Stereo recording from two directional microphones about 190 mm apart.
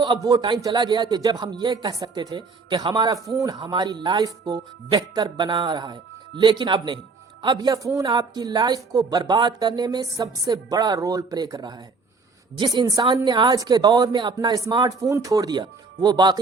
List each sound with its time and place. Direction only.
0.0 s speech: 20° right (ahead or behind)